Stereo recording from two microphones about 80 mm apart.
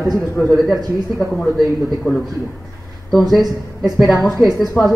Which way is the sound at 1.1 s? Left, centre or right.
Centre.